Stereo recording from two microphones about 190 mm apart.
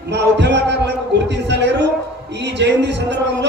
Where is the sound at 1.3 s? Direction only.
65° right (ahead or behind).